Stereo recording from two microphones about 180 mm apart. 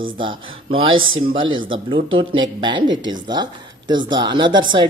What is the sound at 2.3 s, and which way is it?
Speech, 25° right (ahead or behind).